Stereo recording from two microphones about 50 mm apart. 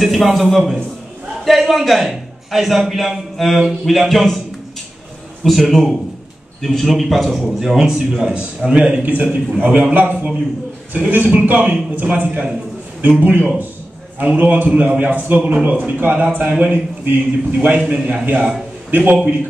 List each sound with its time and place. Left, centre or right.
0.0 s a man's voice: centre
5.4 s a man's voice: centre; by 9.1 s right
9.1 s a man's voice: right
13.2 s a man's voice: right
15.4 s a man's voice: right
17.8 s a man's voice: right
18.9 s a man's voice: right